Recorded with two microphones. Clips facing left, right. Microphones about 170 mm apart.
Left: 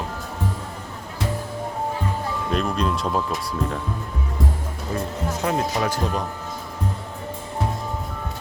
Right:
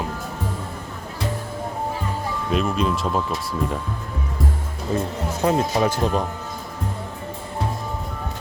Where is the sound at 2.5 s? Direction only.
5° right (ahead or behind).